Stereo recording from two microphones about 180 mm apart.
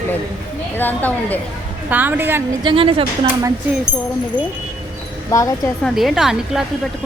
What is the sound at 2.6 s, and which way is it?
Speech, 30° right (ahead or behind).